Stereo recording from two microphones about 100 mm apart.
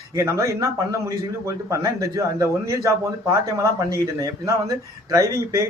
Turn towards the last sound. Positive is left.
turn(degrees=-35)  # may be behind; listen again after turning